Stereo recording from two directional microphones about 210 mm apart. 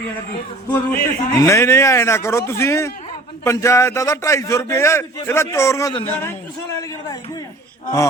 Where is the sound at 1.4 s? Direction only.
15° left (ahead or behind).